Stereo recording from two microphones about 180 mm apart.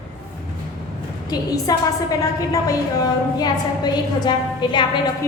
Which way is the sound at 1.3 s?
20° left (ahead or behind).